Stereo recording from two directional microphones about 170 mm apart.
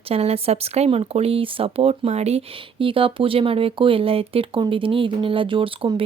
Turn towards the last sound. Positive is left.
turn(degrees=-30)  # may be behind; listen again after turning